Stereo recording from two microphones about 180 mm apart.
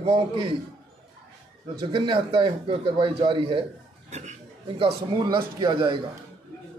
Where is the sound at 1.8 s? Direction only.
30° right (ahead or behind).